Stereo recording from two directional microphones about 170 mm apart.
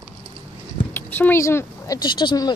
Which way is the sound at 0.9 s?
10° left (ahead or behind).